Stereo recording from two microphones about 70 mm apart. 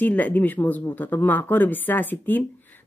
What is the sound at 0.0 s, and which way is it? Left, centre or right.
Speech, left.